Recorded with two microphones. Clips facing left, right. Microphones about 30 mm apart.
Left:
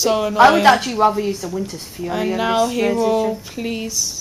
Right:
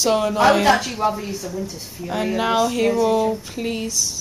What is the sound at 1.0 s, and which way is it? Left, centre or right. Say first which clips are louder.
Speech: left 5 dB; left.